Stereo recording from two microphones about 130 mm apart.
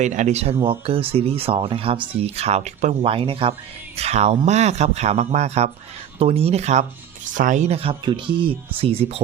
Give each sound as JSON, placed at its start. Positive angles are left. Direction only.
{"t": 0.0, "sound": "speech", "side_deg": -65}
{"t": 0.6, "sound": "speech", "side_deg": -45}
{"t": 3.9, "sound": "speech", "side_deg": -55}
{"t": 7.3, "sound": "speech", "side_deg": -80}
{"t": 7.7, "sound": "speech", "side_deg": -45}